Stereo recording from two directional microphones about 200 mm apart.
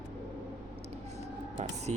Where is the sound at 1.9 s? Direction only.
35° right (ahead or behind).